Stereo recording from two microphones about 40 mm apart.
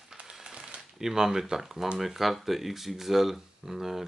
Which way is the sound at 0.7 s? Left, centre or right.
Centre.